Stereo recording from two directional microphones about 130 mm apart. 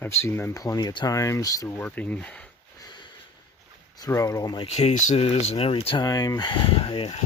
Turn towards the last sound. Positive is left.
turn(degrees=45)  # may be behind; listen again after turning